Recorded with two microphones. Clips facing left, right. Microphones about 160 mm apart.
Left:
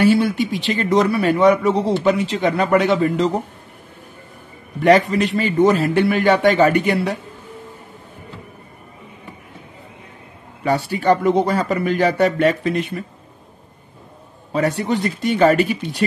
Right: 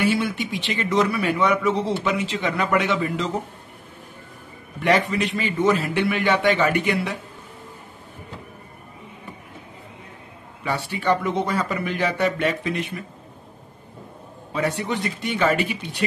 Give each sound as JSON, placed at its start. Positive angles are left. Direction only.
{"t": 0.0, "sound": "a man's voice", "side_deg": 35}
{"t": 4.7, "sound": "a man's voice", "side_deg": 35}
{"t": 10.6, "sound": "a man's voice", "side_deg": 40}
{"t": 14.5, "sound": "a man's voice", "side_deg": 40}